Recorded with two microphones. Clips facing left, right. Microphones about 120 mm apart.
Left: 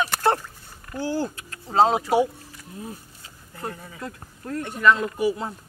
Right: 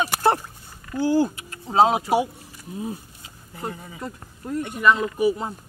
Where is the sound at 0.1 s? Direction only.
15° right (ahead or behind).